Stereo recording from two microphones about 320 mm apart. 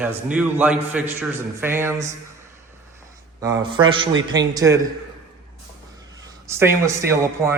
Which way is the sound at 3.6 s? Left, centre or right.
Centre.